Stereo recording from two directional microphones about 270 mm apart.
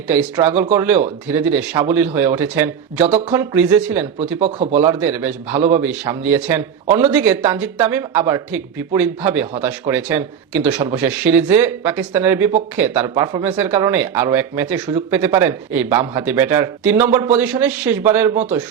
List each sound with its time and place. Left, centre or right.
0.1 s speech: centre
4.4 s speech: right
4.8 s speech: centre
10.8 s speech: centre